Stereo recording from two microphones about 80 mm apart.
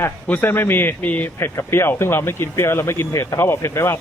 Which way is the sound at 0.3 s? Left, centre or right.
Left.